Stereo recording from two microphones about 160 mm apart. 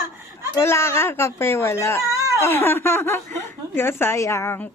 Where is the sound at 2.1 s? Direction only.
20° right (ahead or behind).